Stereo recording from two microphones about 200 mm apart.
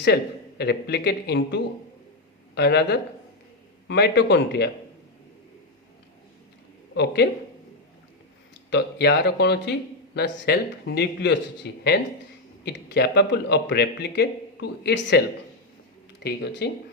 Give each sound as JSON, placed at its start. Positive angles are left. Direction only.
{"t": 0.6, "sound": "speech", "side_deg": 55}
{"t": 6.9, "sound": "speech", "side_deg": 55}
{"t": 8.7, "sound": "speech", "side_deg": 55}
{"t": 16.2, "sound": "speech", "side_deg": 55}